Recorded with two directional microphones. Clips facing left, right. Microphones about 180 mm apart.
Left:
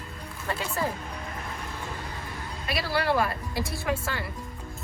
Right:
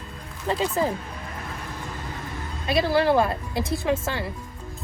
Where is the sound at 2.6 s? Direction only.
25° right (ahead or behind).